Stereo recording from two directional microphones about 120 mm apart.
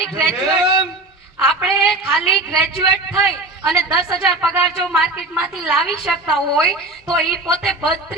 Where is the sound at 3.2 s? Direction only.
Centre (ahead or behind).